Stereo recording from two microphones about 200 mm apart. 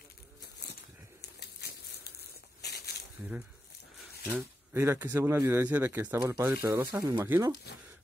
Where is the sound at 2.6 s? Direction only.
55° left (ahead or behind).